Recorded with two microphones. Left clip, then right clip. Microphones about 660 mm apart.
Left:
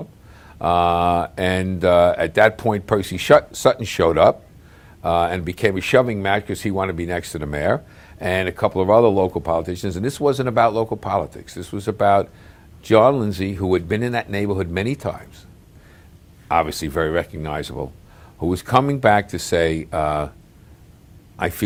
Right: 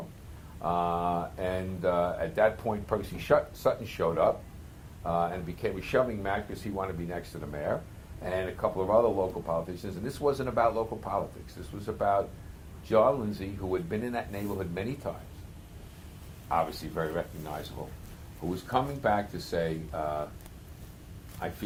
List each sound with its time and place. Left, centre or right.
0.6 s speech: left
16.5 s speech: left
18.7 s speech: left
21.4 s speech: left